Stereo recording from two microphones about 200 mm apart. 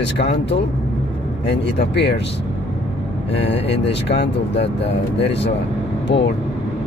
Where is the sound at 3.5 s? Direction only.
60° left (ahead or behind).